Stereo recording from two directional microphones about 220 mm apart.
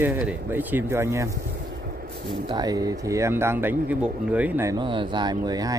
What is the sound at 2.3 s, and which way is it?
Speech, 20° right (ahead or behind).